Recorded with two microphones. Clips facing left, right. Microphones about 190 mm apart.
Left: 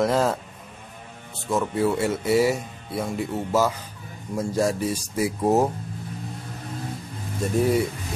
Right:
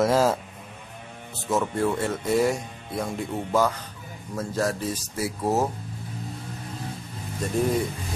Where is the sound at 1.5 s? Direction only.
5° left (ahead or behind).